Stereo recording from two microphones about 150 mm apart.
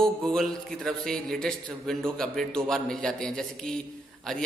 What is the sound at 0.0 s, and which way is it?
A man's voice, 5° left (ahead or behind).